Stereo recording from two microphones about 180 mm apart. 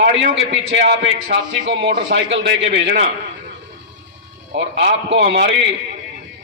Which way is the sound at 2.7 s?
70° right (ahead or behind).